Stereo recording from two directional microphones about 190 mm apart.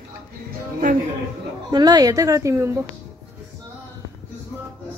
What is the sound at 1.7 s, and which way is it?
Speech, 20° right (ahead or behind).